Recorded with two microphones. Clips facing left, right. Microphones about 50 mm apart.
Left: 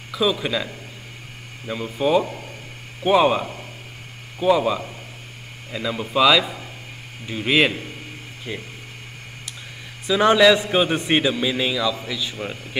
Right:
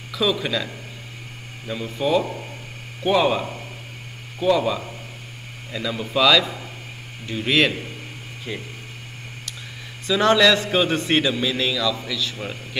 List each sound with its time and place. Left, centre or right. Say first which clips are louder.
0.1 s a man's voice: left 1 dB; centre
1.7 s a man's voice: left 2 dB; centre
10.0 s a man's voice: left 2 dB; centre